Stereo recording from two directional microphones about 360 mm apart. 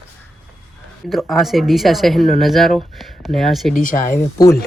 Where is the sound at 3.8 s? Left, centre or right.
Left.